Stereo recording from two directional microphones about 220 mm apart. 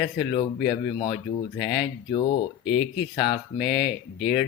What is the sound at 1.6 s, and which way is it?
Speech, centre (ahead or behind).